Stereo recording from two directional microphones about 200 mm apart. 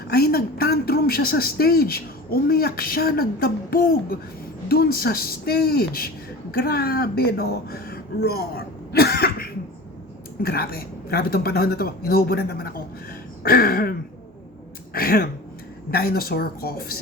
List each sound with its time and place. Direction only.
0.1 s a woman's voice: 50° left (ahead or behind)
14.9 s a woman's voice: 50° left (ahead or behind)